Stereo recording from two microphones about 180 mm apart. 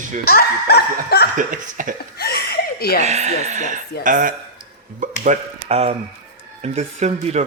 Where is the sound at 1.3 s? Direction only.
45° right (ahead or behind).